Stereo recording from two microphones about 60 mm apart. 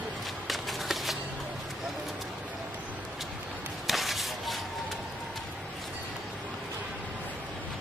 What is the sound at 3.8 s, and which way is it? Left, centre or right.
Whip, centre.